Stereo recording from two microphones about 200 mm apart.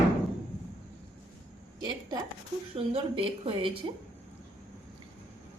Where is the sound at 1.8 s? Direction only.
20° right (ahead or behind).